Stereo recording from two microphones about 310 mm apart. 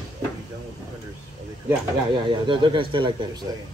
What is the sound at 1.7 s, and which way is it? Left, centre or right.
Speech, centre.